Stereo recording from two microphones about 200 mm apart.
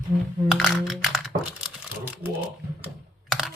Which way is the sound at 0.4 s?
Centre (ahead or behind).